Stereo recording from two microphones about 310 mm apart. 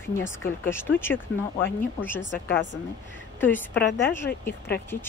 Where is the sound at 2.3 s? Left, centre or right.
Left.